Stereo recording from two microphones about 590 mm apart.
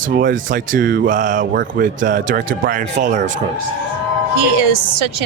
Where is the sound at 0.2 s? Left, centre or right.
Centre.